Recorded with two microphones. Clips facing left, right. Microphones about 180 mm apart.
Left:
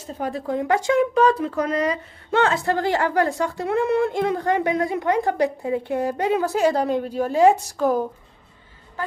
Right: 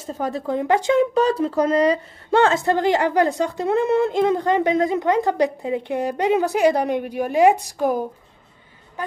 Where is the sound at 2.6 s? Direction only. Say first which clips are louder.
Right 3 dB; 20° right (ahead or behind).